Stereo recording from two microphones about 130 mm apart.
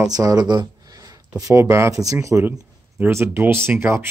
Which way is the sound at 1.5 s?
20° right (ahead or behind).